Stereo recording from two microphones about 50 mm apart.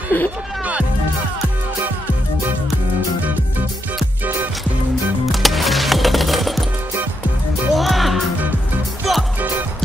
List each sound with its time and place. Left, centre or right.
0.1 s speech: left
5.2 s music: centre
7.7 s music: centre